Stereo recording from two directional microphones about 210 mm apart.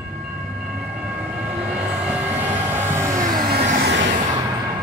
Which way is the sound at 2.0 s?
5° right (ahead or behind).